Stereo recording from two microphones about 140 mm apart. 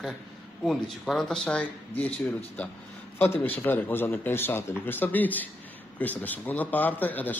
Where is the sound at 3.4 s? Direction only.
15° left (ahead or behind).